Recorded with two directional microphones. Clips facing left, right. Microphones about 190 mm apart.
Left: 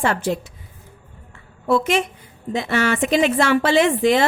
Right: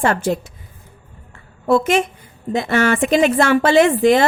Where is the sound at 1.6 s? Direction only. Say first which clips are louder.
Right 3 dB; 45° right (ahead or behind).